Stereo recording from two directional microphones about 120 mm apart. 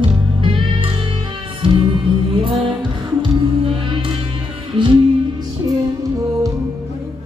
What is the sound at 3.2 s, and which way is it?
Music, 45° right (ahead or behind).